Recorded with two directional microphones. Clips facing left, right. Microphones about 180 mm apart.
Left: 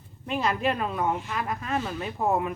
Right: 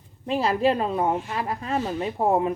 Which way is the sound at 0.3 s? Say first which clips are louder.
Right 5 dB; 35° right (ahead or behind).